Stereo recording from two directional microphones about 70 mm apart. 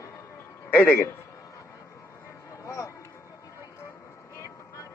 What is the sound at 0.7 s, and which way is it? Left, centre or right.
Speech, left.